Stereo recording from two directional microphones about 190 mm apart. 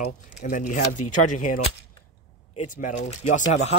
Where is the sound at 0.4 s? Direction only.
40° left (ahead or behind).